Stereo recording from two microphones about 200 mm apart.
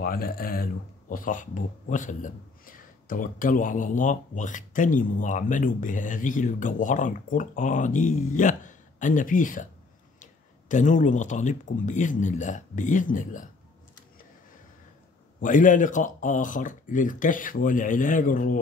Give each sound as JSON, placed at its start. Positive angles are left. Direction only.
{"t": 0.0, "sound": "speech", "side_deg": 50}
{"t": 10.7, "sound": "speech", "side_deg": 40}
{"t": 15.4, "sound": "speech", "side_deg": 40}